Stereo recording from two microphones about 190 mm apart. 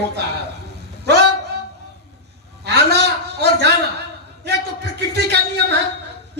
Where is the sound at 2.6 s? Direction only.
60° right (ahead or behind).